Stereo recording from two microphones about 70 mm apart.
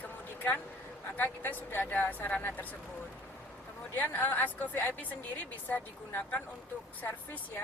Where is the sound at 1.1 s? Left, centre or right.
Left.